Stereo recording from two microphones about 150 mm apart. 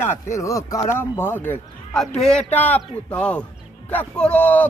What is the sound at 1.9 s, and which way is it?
Speech, 5° left (ahead or behind).